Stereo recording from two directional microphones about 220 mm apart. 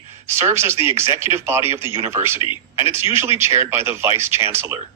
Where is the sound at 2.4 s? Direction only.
25° left (ahead or behind).